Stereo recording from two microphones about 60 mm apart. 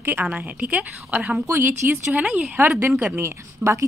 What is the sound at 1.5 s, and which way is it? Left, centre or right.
Speech, right.